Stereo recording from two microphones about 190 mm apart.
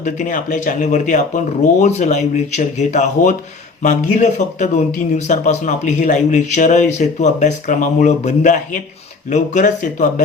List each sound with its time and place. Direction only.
0.0 s speech: 40° left (ahead or behind)